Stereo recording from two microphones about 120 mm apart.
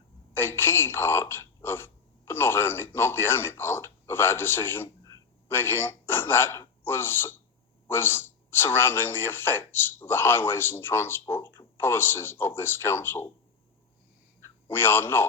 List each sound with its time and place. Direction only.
0.3 s speech: 20° left (ahead or behind)
14.4 s a man's voice: 20° left (ahead or behind)